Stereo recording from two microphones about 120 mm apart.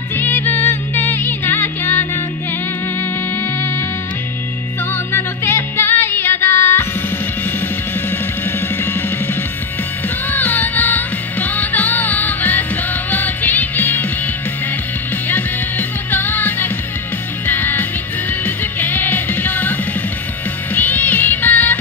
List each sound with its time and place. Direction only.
0.1 s music: 15° left (ahead or behind)
4.9 s music: 20° left (ahead or behind)
8.1 s music: 20° left (ahead or behind)
16.1 s music: 15° left (ahead or behind)